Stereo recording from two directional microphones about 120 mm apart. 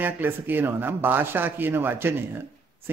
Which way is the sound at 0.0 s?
15° right (ahead or behind).